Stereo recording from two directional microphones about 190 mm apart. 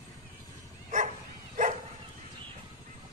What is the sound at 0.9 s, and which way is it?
Bow-wow, 45° right (ahead or behind).